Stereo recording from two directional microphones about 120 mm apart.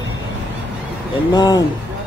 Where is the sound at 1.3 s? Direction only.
40° left (ahead or behind).